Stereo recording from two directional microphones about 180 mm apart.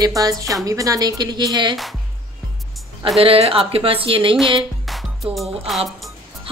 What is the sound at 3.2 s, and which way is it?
Speech, 30° right (ahead or behind).